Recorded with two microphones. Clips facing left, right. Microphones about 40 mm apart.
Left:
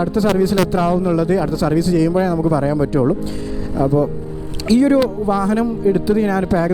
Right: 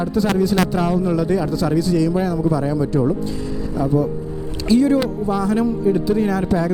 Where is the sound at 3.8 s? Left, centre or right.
Centre.